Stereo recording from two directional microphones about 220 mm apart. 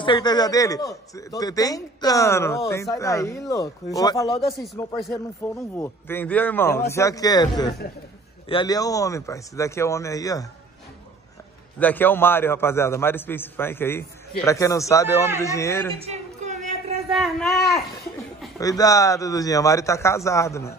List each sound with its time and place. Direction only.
0.0 s a man's voice: 20° left (ahead or behind)
11.8 s a man's voice: 10° left (ahead or behind)
16.0 s a sound: 30° right (ahead or behind)
17.1 s speech: centre (ahead or behind)
18.6 s a man's voice: 15° left (ahead or behind)